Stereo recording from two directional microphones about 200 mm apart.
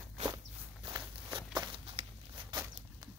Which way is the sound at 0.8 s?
25° right (ahead or behind).